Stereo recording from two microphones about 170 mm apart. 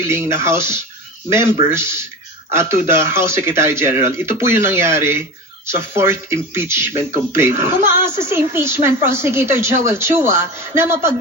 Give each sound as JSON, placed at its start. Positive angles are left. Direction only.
{"t": 0.1, "sound": "a woman's voice", "side_deg": -15}